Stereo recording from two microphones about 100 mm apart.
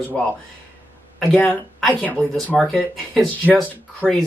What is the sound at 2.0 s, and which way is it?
Speech, 15° left (ahead or behind).